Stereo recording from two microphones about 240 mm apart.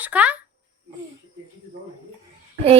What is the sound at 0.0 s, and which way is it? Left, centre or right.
Speech, centre.